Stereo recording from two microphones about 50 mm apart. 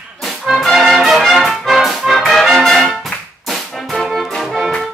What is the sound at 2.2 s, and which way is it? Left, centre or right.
Music, centre.